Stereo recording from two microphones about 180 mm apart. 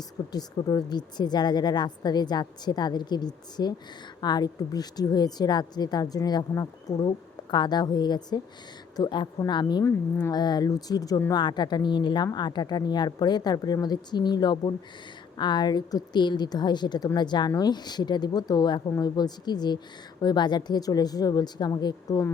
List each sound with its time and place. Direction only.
0.3 s speech: 20° left (ahead or behind)